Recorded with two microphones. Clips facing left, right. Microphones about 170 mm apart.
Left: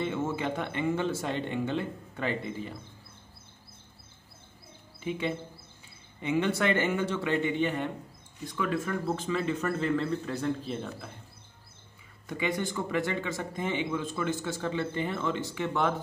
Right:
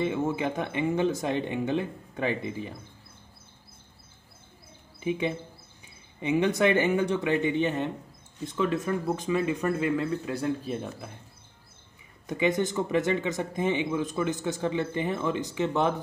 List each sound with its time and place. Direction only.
0.0 s speech: 15° right (ahead or behind)
5.0 s speech: 15° right (ahead or behind)
12.3 s speech: 20° right (ahead or behind)